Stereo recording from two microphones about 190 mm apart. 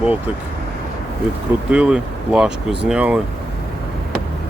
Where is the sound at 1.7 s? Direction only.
5° right (ahead or behind).